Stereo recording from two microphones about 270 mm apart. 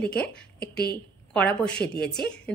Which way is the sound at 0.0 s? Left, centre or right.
Centre.